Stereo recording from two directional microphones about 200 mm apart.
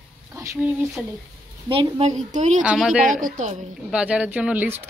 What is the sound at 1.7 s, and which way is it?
Speech, 30° right (ahead or behind).